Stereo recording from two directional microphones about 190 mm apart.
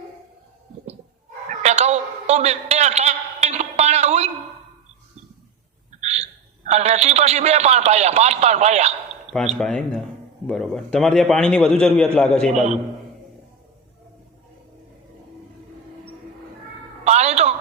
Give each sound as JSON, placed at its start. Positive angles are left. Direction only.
{"t": 1.6, "sound": "a sound", "side_deg": -35}
{"t": 6.0, "sound": "hiccup", "side_deg": -35}
{"t": 6.7, "sound": "a man's voice", "side_deg": -35}
{"t": 9.6, "sound": "a man's voice", "side_deg": 5}
{"t": 12.5, "sound": "a man's voice", "side_deg": -35}
{"t": 17.0, "sound": "a sound", "side_deg": -35}